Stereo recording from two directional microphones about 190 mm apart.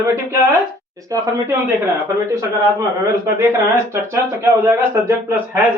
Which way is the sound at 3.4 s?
15° right (ahead or behind).